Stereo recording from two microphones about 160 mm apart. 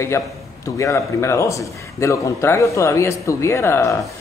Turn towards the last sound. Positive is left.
turn(degrees=15)  # may be behind; listen again after turning